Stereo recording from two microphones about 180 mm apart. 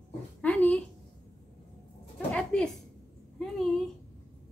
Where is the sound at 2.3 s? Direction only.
5° left (ahead or behind).